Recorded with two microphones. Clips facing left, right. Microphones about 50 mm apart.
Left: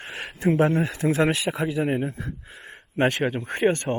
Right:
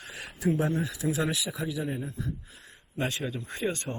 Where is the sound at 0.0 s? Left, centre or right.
Left.